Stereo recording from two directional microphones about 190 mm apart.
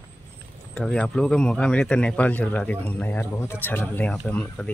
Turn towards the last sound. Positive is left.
turn(degrees=5)  # may be behind; listen again after turning